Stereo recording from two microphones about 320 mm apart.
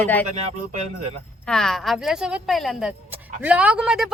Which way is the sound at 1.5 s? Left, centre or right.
Centre.